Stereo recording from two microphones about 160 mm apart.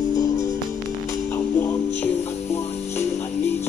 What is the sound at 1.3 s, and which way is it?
Music, 15° left (ahead or behind).